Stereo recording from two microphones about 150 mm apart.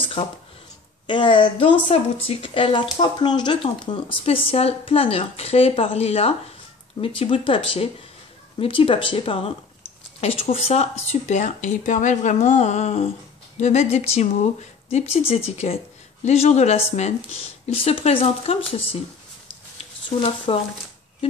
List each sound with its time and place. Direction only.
0.0 s a sound: 35° left (ahead or behind)
1.0 s a woman's voice: 35° left (ahead or behind)
19.8 s speech: 40° left (ahead or behind)